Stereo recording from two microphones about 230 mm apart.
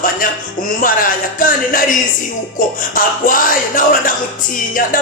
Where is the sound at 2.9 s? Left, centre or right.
Left.